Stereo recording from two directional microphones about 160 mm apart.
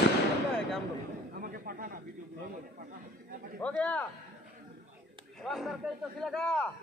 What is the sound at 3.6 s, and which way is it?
Speech, 10° left (ahead or behind).